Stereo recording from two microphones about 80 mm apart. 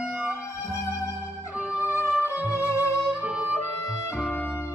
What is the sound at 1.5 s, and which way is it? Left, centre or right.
Music, centre.